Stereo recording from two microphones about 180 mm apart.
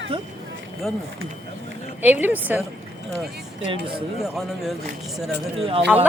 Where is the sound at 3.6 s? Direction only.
30° right (ahead or behind).